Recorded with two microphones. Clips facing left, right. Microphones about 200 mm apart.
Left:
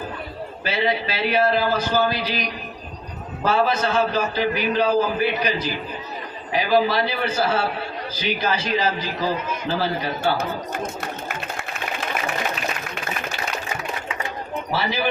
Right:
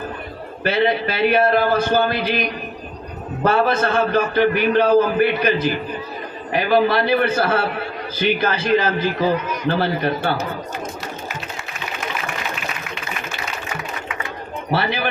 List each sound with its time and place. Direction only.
0.6 s a man's voice: 55° right (ahead or behind)
11.0 s a sound: 55° left (ahead or behind)
14.7 s a man's voice: 60° right (ahead or behind)